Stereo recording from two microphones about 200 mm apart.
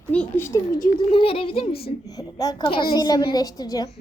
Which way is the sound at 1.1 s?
25° left (ahead or behind).